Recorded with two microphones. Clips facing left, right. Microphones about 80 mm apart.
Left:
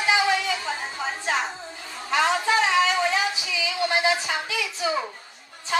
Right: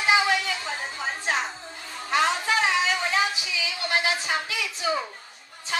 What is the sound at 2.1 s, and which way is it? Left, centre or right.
Music, left.